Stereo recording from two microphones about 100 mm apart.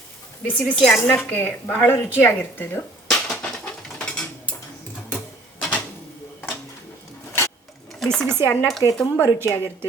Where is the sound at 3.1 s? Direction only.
10° left (ahead or behind).